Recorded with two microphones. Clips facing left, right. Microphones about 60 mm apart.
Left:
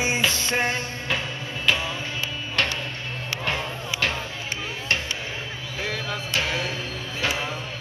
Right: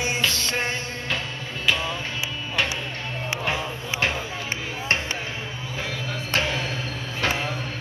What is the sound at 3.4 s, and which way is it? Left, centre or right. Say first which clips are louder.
Music: left 1 dB; centre.